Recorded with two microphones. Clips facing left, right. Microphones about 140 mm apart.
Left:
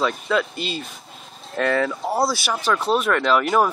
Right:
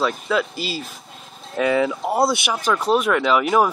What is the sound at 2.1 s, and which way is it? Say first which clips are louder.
Speech: right 2 dB; 20° right (ahead or behind).